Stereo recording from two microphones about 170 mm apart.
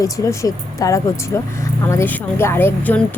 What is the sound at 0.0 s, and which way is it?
A woman's voice, 20° left (ahead or behind).